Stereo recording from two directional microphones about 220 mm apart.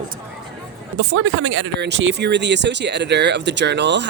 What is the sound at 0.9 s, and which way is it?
Speech, 60° right (ahead or behind).